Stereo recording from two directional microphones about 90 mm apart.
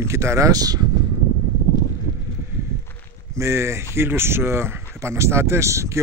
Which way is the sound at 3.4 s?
30° right (ahead or behind).